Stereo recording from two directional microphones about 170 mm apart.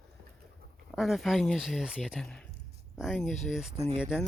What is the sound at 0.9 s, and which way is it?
Speech, centre (ahead or behind).